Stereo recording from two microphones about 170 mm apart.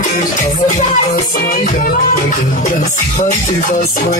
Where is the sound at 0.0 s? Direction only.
50° left (ahead or behind).